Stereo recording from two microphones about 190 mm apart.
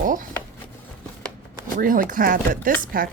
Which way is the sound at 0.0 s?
45° right (ahead or behind).